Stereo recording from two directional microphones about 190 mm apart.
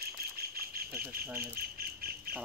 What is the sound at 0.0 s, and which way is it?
Insect, 55° right (ahead or behind).